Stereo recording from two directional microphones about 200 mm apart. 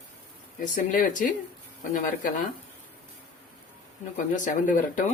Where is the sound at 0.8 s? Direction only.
40° left (ahead or behind).